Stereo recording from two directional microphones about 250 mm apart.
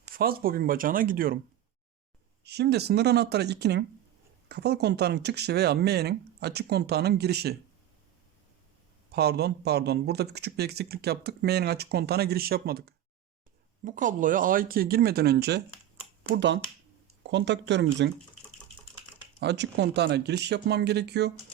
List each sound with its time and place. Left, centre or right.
0.1 s speech: right
2.4 s speech: right
9.1 s speech: right
19.4 s speech: right